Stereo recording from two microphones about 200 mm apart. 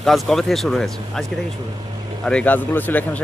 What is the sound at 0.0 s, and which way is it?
Speech, centre (ahead or behind).